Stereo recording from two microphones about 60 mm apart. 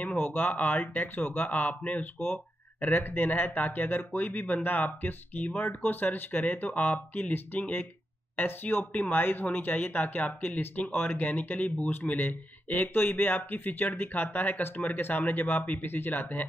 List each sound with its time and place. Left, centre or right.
0.1 s speech: left
2.1 s speech: left